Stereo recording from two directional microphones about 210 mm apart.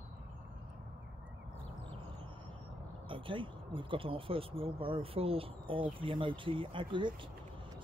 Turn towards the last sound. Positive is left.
turn(degrees=-25)  # may be behind; listen again after turning